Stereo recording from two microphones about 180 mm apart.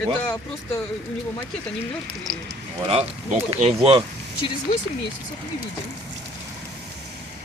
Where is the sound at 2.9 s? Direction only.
35° right (ahead or behind).